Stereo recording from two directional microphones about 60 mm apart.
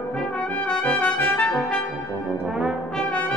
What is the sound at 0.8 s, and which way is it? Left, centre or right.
Brass instrument, left.